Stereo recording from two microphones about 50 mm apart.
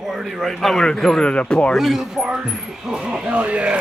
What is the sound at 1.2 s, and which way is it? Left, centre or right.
Speech, left.